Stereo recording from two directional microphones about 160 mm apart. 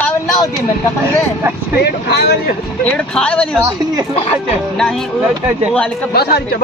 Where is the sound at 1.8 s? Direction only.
90° left.